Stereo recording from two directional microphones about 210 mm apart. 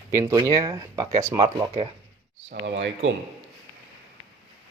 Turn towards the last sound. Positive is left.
turn(degrees=-60)  # may be behind; listen again after turning